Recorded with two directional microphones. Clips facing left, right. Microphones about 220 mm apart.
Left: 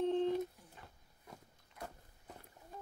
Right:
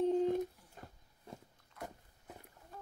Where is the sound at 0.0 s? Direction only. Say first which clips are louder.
Right 2 dB; 10° right (ahead or behind).